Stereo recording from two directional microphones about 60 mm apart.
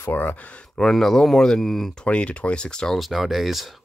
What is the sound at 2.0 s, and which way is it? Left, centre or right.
Speech, centre.